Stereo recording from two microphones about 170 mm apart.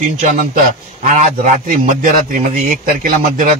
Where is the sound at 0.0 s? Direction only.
50° right (ahead or behind).